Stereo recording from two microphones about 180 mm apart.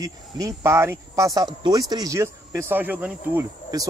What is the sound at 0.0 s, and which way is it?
Speech, 15° right (ahead or behind).